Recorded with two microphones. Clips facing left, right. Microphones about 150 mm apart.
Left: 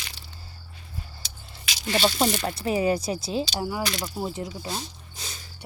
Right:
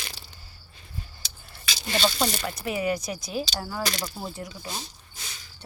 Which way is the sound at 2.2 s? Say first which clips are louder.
Left 3 dB; 30° left (ahead or behind).